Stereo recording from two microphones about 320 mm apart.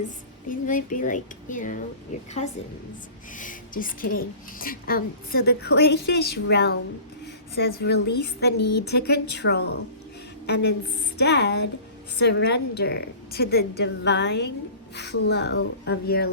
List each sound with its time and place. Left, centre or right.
0.4 s a woman's voice: left
3.3 s a woman's voice: left
8.6 s a woman's voice: left
8.9 s a woman's voice: left